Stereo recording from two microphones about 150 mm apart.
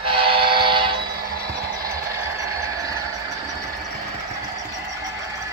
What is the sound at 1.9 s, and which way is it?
Engine, 20° right (ahead or behind).